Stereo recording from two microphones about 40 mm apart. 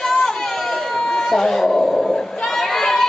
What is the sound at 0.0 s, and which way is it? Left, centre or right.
Chatter, centre.